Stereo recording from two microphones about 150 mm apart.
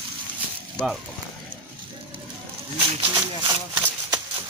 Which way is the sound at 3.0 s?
35° right (ahead or behind).